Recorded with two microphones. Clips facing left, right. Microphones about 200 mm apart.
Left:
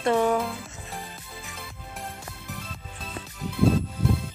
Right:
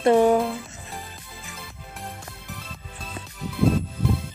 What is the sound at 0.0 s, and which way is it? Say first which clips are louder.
Music: right 5 dB; 25° right (ahead or behind).